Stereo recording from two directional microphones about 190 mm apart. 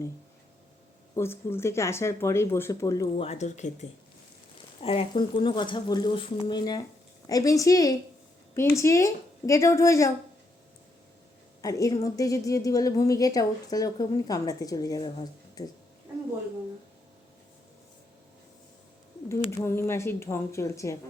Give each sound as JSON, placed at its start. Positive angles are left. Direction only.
{"t": 1.1, "sound": "speech", "side_deg": 15}
{"t": 3.2, "sound": "a woman's voice", "side_deg": 35}
{"t": 11.6, "sound": "a woman's voice", "side_deg": 20}
{"t": 19.3, "sound": "speech", "side_deg": 15}